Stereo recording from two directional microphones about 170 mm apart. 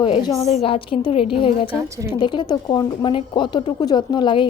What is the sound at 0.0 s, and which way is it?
Speech, 30° left (ahead or behind).